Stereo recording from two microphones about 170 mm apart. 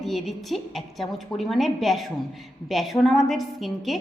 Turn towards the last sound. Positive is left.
turn(degrees=0)  # may be behind; listen again after turning